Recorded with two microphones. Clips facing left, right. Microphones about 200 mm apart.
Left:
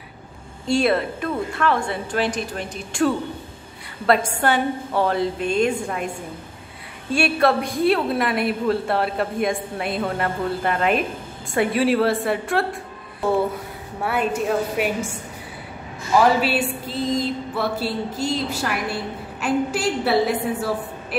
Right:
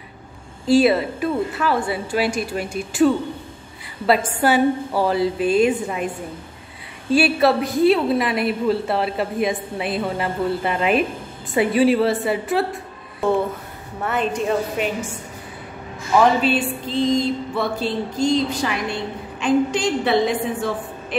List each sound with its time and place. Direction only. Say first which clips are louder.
0.7 s a woman's voice: right 4 dB; 5° right (ahead or behind)
4.4 s a woman's voice: right 4 dB; 5° right (ahead or behind)
7.1 s a woman's voice: right 3 dB; centre (ahead or behind)
14.0 s a woman's voice: even; 10° left (ahead or behind)
16.3 s a woman's voice: right 2 dB; 5° left (ahead or behind)